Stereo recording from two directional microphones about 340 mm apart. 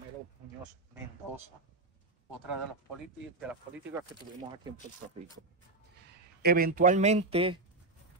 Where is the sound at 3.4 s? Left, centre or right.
Centre.